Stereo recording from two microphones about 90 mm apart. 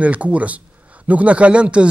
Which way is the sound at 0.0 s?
15° right (ahead or behind).